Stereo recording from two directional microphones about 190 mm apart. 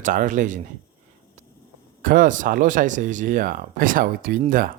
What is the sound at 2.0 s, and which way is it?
Speech, 45° right (ahead or behind).